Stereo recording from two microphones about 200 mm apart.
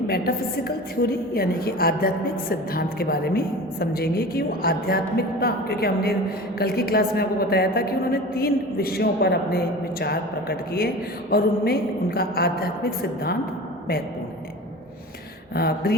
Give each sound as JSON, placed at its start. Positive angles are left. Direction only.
{"t": 1.3, "sound": "a woman's voice", "side_deg": 50}
{"t": 15.5, "sound": "a woman's voice", "side_deg": 50}